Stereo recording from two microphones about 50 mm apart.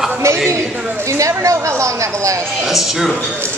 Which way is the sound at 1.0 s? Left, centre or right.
Right.